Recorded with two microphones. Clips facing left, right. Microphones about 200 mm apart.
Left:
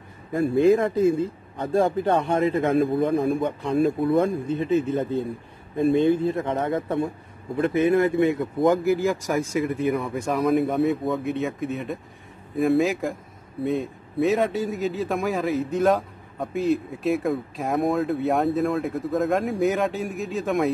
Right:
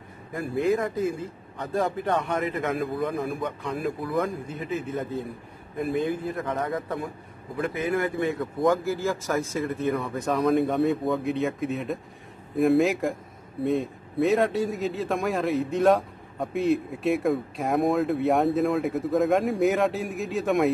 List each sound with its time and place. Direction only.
0.3 s a man's voice: 30° left (ahead or behind); by 20.7 s centre (ahead or behind)